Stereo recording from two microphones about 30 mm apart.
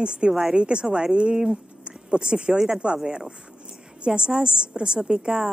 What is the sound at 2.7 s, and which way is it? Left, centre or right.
Speech, right.